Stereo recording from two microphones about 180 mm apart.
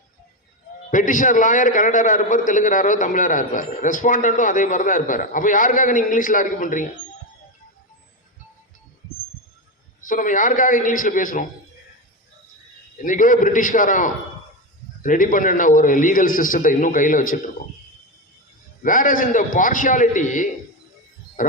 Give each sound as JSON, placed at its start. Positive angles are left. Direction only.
{"t": 0.9, "sound": "a man's voice", "side_deg": 45}
{"t": 10.1, "sound": "a man's voice", "side_deg": 45}
{"t": 13.0, "sound": "a man's voice", "side_deg": 45}
{"t": 18.8, "sound": "a man's voice", "side_deg": 50}